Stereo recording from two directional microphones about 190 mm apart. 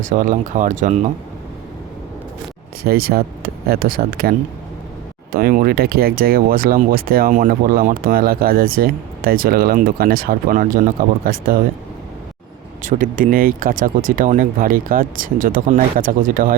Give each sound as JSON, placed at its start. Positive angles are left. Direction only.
{"t": 0.1, "sound": "speech", "side_deg": -45}
{"t": 2.8, "sound": "speech", "side_deg": -55}
{"t": 12.8, "sound": "speech", "side_deg": -45}